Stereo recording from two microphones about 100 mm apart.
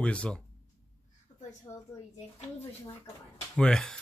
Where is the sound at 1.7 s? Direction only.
35° left (ahead or behind).